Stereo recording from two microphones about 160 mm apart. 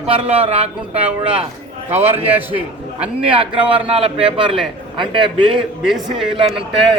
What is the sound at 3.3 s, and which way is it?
A man's voice, 30° right (ahead or behind).